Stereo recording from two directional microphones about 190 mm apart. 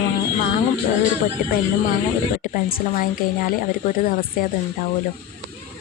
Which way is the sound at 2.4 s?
45° left (ahead or behind).